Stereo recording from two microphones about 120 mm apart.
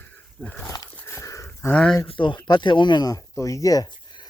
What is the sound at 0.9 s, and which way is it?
Dog, 20° left (ahead or behind).